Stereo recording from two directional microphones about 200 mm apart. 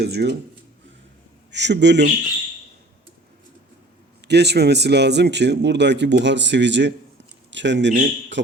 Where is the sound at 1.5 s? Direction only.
60° right (ahead or behind).